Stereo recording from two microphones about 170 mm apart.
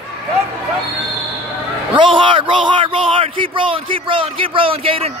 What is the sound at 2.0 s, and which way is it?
Speech, 30° right (ahead or behind).